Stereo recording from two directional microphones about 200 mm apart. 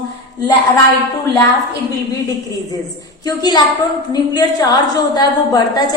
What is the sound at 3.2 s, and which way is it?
A woman's voice, 20° left (ahead or behind).